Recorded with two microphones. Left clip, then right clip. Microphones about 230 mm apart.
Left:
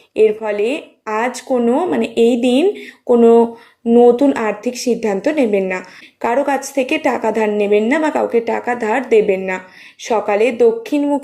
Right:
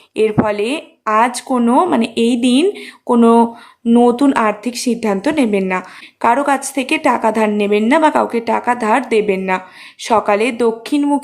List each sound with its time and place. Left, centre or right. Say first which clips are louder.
0.2 s speech: left 1 dB; centre